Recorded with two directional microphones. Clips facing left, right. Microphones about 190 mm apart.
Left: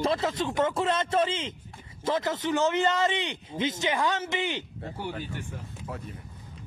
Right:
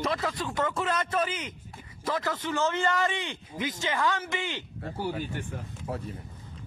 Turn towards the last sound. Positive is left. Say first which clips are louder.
# right 4 dB
turn(degrees=-30)  # may be behind; listen again after turning